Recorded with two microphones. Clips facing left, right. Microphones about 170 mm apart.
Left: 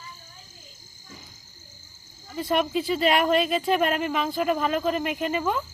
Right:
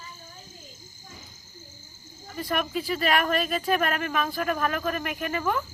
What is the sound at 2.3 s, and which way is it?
Speech, 25° left (ahead or behind).